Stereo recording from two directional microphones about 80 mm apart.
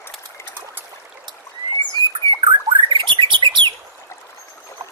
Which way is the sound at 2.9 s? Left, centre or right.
Right.